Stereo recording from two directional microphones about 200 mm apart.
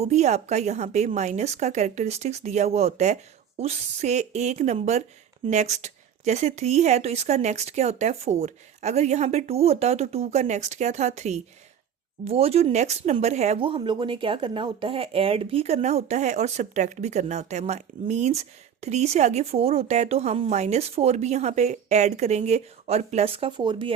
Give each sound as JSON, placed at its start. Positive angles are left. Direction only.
{"t": 0.0, "sound": "speech", "side_deg": -35}